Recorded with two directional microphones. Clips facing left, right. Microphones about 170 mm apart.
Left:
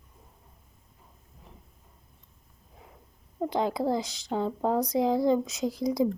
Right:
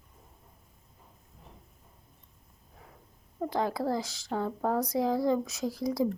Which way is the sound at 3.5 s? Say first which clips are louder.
Left 3 dB; 20° left (ahead or behind).